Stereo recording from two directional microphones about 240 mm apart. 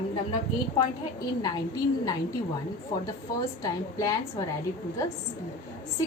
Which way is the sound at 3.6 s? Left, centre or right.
Centre.